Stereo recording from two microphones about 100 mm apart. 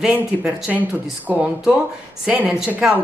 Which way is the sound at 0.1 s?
15° right (ahead or behind).